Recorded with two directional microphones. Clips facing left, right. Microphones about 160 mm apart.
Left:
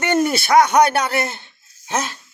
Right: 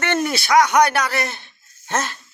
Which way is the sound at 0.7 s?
25° left (ahead or behind).